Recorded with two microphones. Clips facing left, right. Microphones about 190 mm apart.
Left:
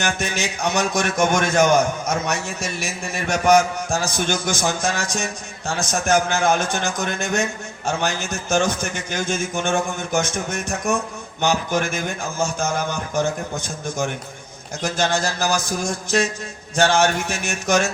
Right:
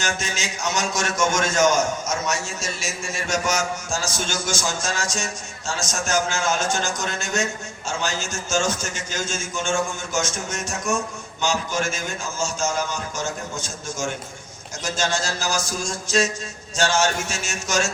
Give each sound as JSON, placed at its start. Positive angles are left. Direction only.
{"t": 0.0, "sound": "a man's voice", "side_deg": 60}